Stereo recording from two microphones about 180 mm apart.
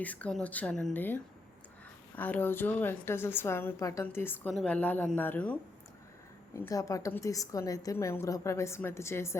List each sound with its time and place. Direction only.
0.0 s a woman's voice: 10° left (ahead or behind)